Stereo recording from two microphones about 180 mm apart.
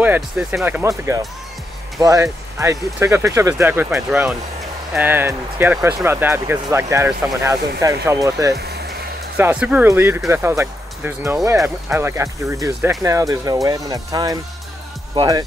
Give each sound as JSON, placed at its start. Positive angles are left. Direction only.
{"t": 0.0, "sound": "speech", "side_deg": -10}